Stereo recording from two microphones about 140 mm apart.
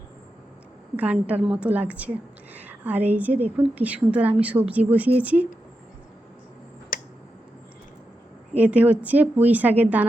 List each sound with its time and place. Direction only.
0.9 s a woman's voice: 10° right (ahead or behind)
6.9 s finger snapping: 90° left
8.5 s a woman's voice: 10° right (ahead or behind)